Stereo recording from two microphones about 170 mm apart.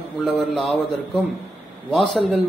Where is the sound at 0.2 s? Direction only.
Centre (ahead or behind).